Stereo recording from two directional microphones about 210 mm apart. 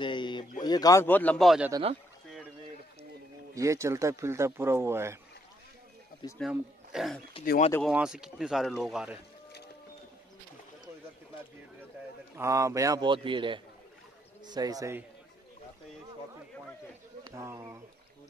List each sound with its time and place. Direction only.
0.0 s a sound: 20° left (ahead or behind)
0.6 s speech: 20° left (ahead or behind); by 1.7 s centre (ahead or behind)
1.7 s speech: 25° right (ahead or behind)
3.5 s speech: 15° right (ahead or behind)
6.5 s speech: centre (ahead or behind)
12.4 s speech: 15° right (ahead or behind)
17.2 s speech: 15° right (ahead or behind)